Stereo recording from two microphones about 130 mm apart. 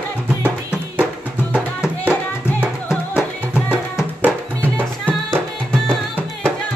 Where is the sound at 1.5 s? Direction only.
10° right (ahead or behind).